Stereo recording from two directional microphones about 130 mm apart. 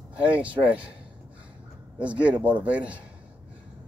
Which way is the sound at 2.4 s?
10° right (ahead or behind).